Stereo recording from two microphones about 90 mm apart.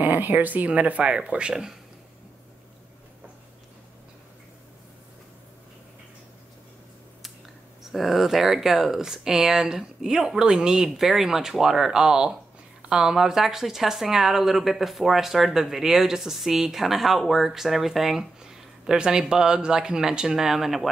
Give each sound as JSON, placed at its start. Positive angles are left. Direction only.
{"t": 0.0, "sound": "speech", "side_deg": -20}
{"t": 7.8, "sound": "speech", "side_deg": 0}